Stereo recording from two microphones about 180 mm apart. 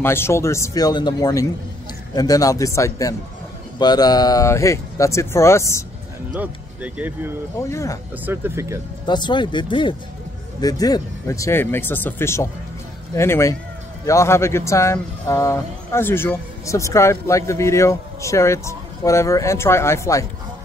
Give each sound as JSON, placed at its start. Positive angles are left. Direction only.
{"t": 0.0, "sound": "a man's voice", "side_deg": 15}
{"t": 6.3, "sound": "speech", "side_deg": -10}
{"t": 7.6, "sound": "speech", "side_deg": 15}
{"t": 8.3, "sound": "speech", "side_deg": -15}
{"t": 9.0, "sound": "a man's voice", "side_deg": 25}